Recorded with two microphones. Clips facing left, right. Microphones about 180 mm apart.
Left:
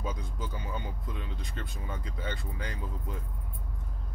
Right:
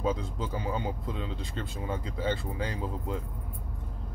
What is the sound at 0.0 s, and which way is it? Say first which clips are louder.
Speech: right 7 dB; 25° right (ahead or behind).